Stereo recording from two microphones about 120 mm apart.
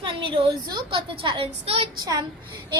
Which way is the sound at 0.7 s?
45° right (ahead or behind).